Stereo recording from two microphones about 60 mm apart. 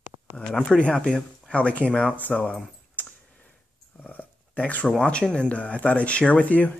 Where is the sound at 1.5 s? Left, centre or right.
Left.